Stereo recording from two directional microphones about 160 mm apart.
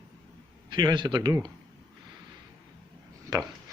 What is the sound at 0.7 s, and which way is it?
Speech, 25° right (ahead or behind).